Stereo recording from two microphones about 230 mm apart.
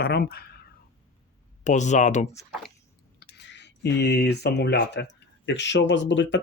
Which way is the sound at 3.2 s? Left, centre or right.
Left.